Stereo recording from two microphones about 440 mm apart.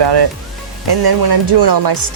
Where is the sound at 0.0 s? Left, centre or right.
Right.